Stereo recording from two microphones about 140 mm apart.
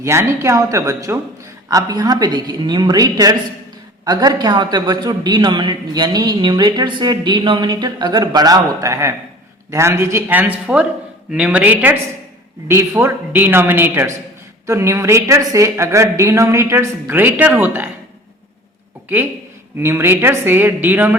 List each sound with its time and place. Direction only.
0.0 s a woman's voice: 20° right (ahead or behind)
19.0 s a woman's voice: 15° right (ahead or behind)